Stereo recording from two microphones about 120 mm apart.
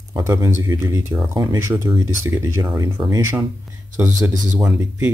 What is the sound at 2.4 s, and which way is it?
Speech, 25° right (ahead or behind).